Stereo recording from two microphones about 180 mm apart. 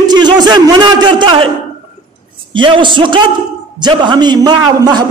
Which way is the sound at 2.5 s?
25° right (ahead or behind).